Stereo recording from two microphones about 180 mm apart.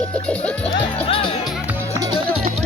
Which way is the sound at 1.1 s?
30° left (ahead or behind).